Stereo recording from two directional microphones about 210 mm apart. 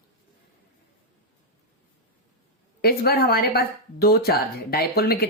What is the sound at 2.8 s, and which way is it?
Speech, 50° left (ahead or behind).